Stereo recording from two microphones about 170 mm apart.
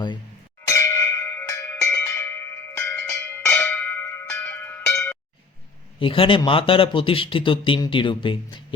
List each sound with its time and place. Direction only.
0.7 s tubular bells: 20° left (ahead or behind)
6.0 s speech: 30° left (ahead or behind)